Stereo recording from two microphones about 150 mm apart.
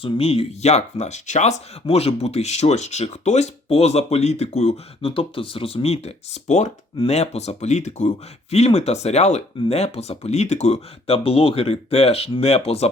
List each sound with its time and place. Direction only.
0.0 s speech: 40° left (ahead or behind)